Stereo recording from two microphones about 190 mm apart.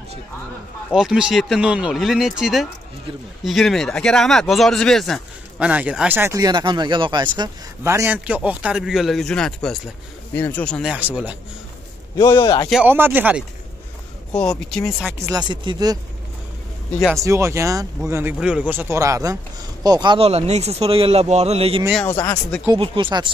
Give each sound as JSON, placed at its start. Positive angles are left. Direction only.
{"t": 0.9, "sound": "speech", "side_deg": -5}
{"t": 12.2, "sound": "a man's voice", "side_deg": 20}
{"t": 12.6, "sound": "speech", "side_deg": -5}
{"t": 14.3, "sound": "speech", "side_deg": 5}
{"t": 15.1, "sound": "speech", "side_deg": -15}
{"t": 17.2, "sound": "speech", "side_deg": -15}
{"t": 22.0, "sound": "speech", "side_deg": 15}
{"t": 22.8, "sound": "speech", "side_deg": -25}